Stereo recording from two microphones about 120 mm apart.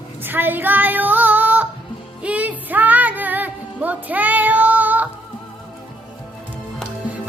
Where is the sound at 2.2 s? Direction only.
10° right (ahead or behind).